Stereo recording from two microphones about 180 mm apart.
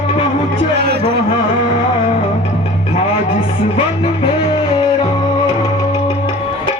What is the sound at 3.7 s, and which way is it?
Music, 30° left (ahead or behind).